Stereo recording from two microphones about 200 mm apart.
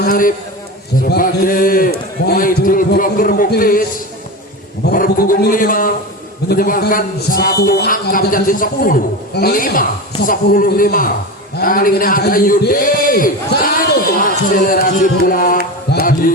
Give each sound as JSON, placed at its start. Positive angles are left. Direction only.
{"t": 0.0, "sound": "a man's voice", "side_deg": 45}
{"t": 4.9, "sound": "a man's voice", "side_deg": 45}